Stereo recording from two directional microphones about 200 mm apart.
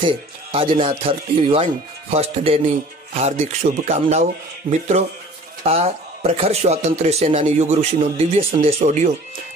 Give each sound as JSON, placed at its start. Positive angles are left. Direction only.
{"t": 0.0, "sound": "speech", "side_deg": -25}